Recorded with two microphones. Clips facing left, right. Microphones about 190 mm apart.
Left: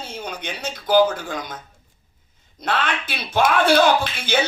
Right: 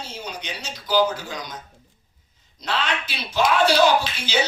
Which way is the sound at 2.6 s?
55° left (ahead or behind).